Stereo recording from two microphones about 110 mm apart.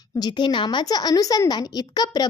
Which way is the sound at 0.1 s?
40° left (ahead or behind).